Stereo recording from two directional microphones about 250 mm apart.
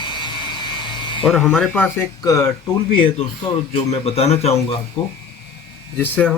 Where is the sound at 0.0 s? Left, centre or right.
Centre.